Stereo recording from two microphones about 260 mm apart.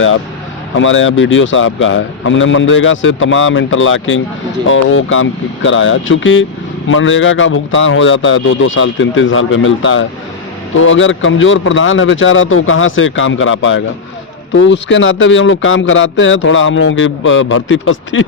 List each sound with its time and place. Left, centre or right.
0.7 s speech: left